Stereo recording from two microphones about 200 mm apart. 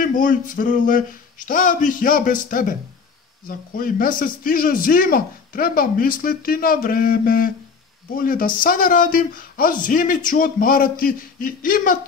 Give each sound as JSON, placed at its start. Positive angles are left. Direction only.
{"t": 0.0, "sound": "a man's voice", "side_deg": 40}